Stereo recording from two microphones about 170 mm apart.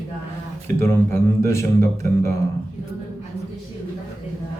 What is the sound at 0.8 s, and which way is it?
Speech, 15° left (ahead or behind).